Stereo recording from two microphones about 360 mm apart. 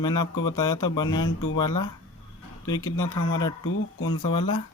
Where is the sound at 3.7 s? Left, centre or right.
Left.